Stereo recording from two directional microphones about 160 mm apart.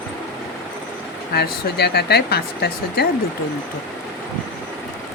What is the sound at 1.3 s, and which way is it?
Speech, 85° left.